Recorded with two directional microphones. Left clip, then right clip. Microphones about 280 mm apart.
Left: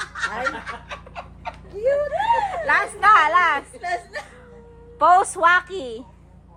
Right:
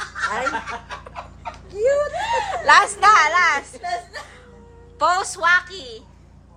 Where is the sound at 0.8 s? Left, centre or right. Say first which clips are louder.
Right 1 dB; left.